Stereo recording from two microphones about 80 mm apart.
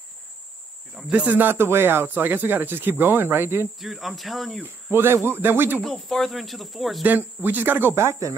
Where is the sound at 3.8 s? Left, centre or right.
Centre.